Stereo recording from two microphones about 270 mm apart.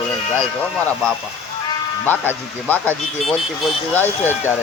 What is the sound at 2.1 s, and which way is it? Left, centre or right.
Speech, centre.